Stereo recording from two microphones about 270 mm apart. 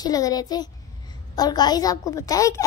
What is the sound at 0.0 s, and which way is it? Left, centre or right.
A child's voice, centre.